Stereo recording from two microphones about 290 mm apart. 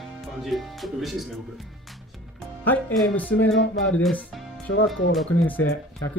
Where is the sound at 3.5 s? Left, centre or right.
Left.